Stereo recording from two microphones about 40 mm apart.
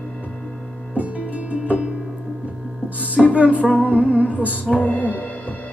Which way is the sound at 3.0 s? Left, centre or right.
Right.